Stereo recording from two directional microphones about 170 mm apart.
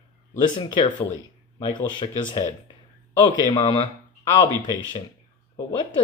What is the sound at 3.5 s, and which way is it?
Speech, 25° left (ahead or behind).